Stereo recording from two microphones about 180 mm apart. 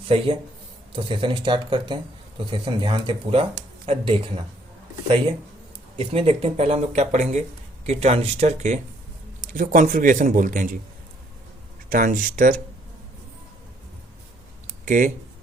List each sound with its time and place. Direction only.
0.1 s speech: 30° right (ahead or behind)
6.0 s a man's voice: 30° right (ahead or behind)
11.9 s speech: 50° right (ahead or behind)
14.7 s a sound: 45° right (ahead or behind)